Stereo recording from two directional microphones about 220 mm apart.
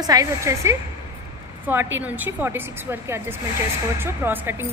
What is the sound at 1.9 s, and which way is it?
A woman's voice, 5° right (ahead or behind).